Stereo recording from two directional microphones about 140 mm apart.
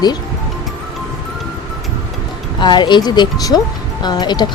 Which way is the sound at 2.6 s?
35° left (ahead or behind).